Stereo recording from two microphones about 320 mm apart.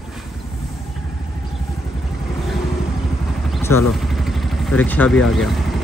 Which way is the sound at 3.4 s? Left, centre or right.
Centre.